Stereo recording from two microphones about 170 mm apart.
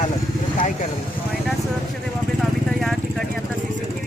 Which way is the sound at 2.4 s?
Centre (ahead or behind).